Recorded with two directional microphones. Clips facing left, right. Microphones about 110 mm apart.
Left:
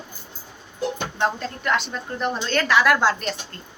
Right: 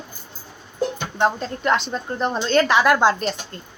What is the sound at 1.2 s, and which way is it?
A woman's voice, 25° right (ahead or behind).